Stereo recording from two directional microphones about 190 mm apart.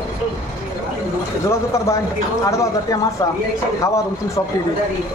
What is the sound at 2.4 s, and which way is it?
Speech, 15° left (ahead or behind).